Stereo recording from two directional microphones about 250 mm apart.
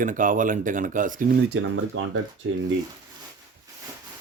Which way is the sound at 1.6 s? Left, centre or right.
Right.